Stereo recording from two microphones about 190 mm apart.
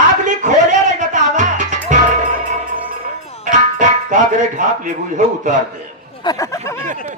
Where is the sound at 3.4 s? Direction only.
40° right (ahead or behind).